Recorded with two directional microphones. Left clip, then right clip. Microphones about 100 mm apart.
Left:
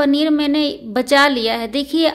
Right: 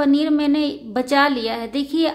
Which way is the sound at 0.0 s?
30° left (ahead or behind).